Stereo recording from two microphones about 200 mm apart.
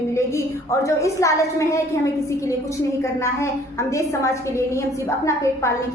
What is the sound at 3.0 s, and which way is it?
A woman's voice, 15° left (ahead or behind).